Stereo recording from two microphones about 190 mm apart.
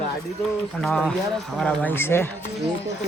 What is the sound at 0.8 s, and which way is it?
Speech, 5° left (ahead or behind).